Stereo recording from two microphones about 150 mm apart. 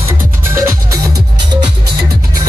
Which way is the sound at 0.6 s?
20° right (ahead or behind).